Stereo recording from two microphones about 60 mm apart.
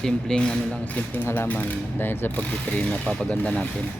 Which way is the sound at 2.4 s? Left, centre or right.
Left.